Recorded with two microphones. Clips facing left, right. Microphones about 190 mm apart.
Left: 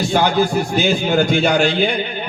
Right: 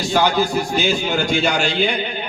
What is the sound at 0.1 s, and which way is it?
A man's voice, 55° left (ahead or behind).